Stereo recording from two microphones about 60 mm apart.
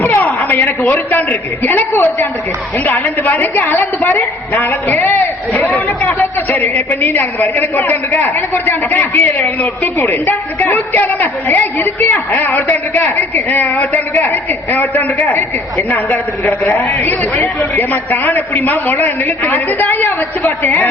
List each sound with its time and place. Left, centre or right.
0.0 s a sound: left
0.9 s a man's voice: left
16.4 s a man's voice: left